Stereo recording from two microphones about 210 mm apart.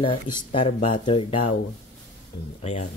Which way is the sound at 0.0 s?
25° left (ahead or behind).